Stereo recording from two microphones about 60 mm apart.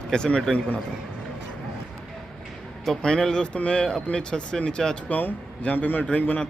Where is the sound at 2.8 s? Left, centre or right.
Centre.